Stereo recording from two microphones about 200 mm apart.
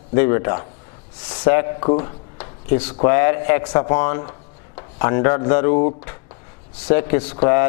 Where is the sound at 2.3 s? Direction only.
15° left (ahead or behind).